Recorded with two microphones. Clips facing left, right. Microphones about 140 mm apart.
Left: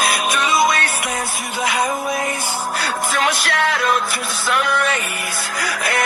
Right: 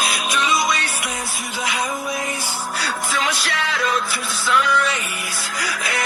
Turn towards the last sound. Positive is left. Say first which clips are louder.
# left 4 dB
turn(degrees=55)  # may be behind; listen again after turning